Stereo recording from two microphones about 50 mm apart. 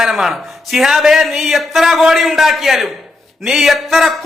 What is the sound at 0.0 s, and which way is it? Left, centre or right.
Speech, centre.